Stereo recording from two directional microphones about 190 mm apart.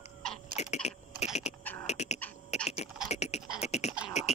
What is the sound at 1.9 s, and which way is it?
Beatboxing, 35° left (ahead or behind).